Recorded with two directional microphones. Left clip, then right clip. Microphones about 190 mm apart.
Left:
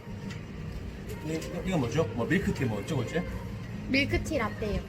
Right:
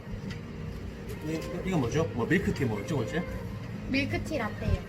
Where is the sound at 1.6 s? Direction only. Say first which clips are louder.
Even; 20° left (ahead or behind).